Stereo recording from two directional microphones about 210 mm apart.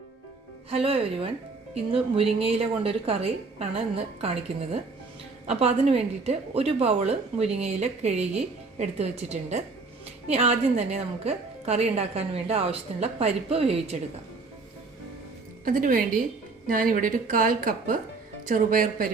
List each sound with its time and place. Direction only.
0.7 s a woman's voice: 25° right (ahead or behind)
15.6 s a woman's voice: 40° right (ahead or behind)